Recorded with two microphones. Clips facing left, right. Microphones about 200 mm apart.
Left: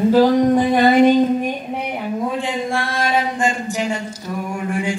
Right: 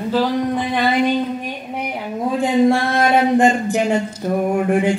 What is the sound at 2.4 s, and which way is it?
Chant, 50° right (ahead or behind).